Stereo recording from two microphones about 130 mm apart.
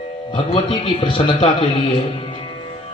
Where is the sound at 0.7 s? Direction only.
40° left (ahead or behind).